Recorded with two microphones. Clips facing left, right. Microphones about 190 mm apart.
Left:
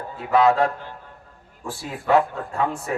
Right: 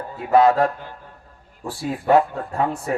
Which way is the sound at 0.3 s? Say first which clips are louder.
Right 2 dB; 45° right (ahead or behind).